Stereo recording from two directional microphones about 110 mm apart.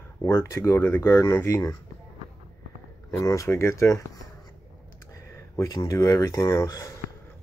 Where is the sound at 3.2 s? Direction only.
30° left (ahead or behind).